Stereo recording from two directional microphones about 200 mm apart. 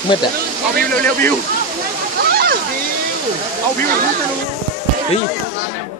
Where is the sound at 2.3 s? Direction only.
50° right (ahead or behind).